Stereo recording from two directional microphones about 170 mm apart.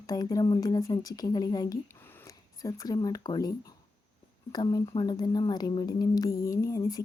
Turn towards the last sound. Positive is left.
turn(degrees=20)  # may be behind; listen again after turning